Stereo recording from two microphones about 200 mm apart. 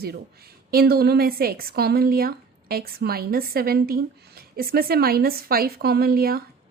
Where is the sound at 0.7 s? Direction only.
50° right (ahead or behind).